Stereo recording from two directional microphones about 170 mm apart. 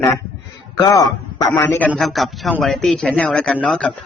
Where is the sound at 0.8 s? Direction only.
20° left (ahead or behind).